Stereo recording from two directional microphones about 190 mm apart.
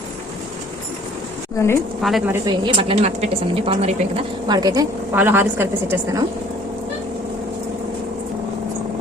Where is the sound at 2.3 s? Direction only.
25° right (ahead or behind).